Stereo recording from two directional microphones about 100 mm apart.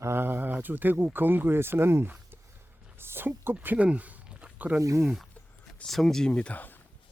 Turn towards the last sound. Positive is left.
turn(degrees=15)  # may be behind; listen again after turning